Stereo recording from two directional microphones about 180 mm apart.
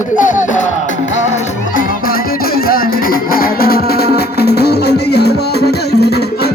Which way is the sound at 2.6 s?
55° left (ahead or behind).